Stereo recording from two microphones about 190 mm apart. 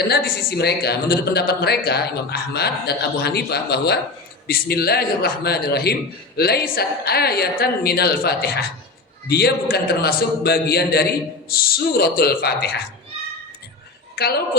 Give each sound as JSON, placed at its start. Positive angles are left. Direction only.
{"t": 0.1, "sound": "a man's voice", "side_deg": 55}
{"t": 14.2, "sound": "a man's voice", "side_deg": 55}